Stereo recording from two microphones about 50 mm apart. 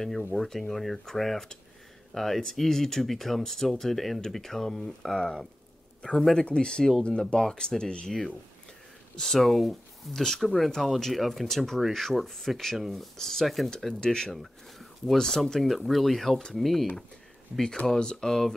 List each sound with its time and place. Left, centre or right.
0.3 s speech: centre
6.4 s speech: centre
9.1 s speech: centre
14.0 s speech: centre
14.3 s speech: centre
15.1 s speech: centre
17.8 s speech: centre